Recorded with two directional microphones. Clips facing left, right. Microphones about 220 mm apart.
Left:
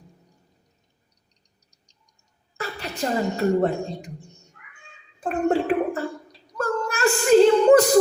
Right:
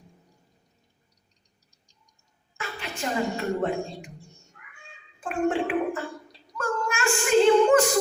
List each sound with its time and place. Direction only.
2.6 s a woman's voice: 40° left (ahead or behind)
5.2 s speech: 40° left (ahead or behind)
6.6 s a sound: 40° left (ahead or behind)